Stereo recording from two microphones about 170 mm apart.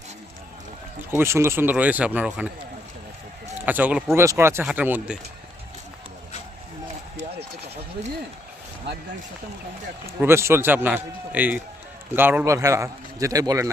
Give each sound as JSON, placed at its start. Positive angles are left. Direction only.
{"t": 1.1, "sound": "a man's voice", "side_deg": -15}
{"t": 3.7, "sound": "a man's voice", "side_deg": -10}
{"t": 8.9, "sound": "speech", "side_deg": -90}
{"t": 10.2, "sound": "a man's voice", "side_deg": -15}